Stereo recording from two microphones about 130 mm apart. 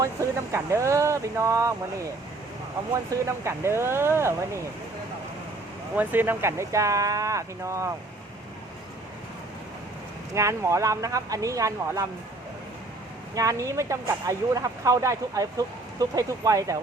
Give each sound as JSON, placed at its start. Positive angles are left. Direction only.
{"t": 0.0, "sound": "speech", "side_deg": -25}
{"t": 6.0, "sound": "speech", "side_deg": -15}
{"t": 10.3, "sound": "speech", "side_deg": -25}
{"t": 13.3, "sound": "speech", "side_deg": -25}